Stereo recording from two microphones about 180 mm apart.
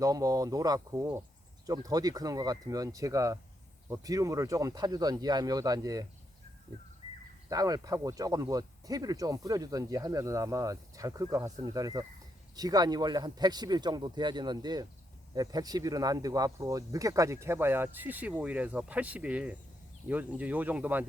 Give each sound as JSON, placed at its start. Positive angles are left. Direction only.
{"t": 0.0, "sound": "speech", "side_deg": -20}
{"t": 7.5, "sound": "speech", "side_deg": -20}